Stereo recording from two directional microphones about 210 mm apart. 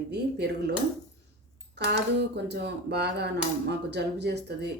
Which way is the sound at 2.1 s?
55° right (ahead or behind).